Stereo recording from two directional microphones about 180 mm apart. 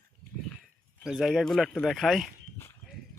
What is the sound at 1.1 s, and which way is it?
Speech, centre (ahead or behind).